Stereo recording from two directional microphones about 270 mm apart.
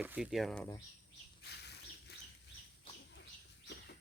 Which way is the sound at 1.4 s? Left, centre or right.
Left.